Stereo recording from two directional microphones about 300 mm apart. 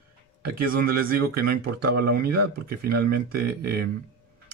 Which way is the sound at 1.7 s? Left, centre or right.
Right.